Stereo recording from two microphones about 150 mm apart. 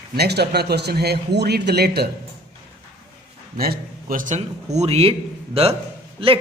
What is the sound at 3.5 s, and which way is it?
A man's voice, 85° right.